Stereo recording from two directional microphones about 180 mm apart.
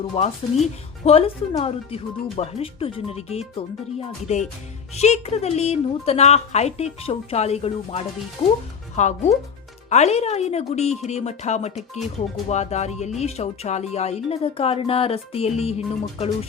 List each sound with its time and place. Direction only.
0.0 s speech: 35° left (ahead or behind)